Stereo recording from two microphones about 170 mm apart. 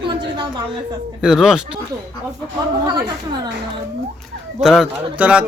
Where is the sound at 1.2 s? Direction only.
5° right (ahead or behind).